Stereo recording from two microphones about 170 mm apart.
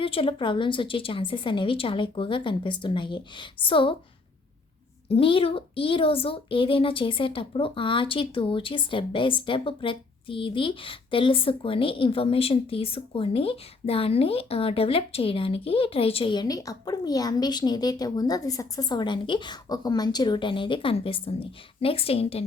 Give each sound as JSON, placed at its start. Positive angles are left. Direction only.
{"t": 0.0, "sound": "a woman's voice", "side_deg": 30}
{"t": 5.0, "sound": "a woman's voice", "side_deg": 35}